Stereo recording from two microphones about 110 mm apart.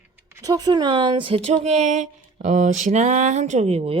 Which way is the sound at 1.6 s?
90° right.